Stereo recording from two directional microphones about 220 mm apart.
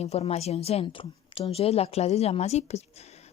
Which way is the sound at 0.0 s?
30° left (ahead or behind).